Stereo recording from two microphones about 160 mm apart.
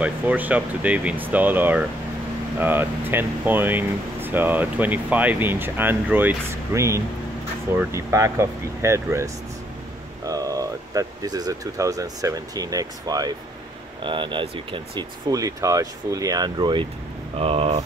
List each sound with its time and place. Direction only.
0.0 s speech: 10° right (ahead or behind); by 17.8 s 35° right (ahead or behind)